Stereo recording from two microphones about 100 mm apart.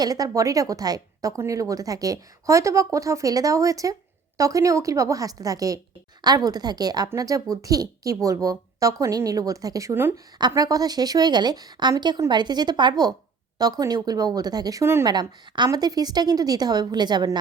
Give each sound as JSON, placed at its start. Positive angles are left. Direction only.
{"t": 0.0, "sound": "speech", "side_deg": -40}
{"t": 9.9, "sound": "a woman's voice", "side_deg": -25}
{"t": 10.5, "sound": "a woman's voice", "side_deg": -35}
{"t": 15.0, "sound": "speech", "side_deg": -45}